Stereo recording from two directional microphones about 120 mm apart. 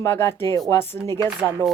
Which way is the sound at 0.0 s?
20° left (ahead or behind).